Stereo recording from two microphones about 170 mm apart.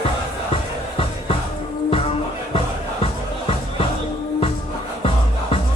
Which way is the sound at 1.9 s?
35° left (ahead or behind).